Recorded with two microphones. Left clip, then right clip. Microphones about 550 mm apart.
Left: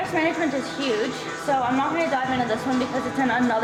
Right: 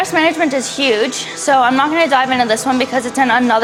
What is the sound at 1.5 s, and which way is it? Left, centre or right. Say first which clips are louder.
Speech: right 11 dB; right.